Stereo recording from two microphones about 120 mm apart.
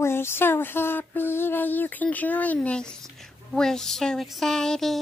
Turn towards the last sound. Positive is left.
turn(degrees=5)  # may be behind; listen again after turning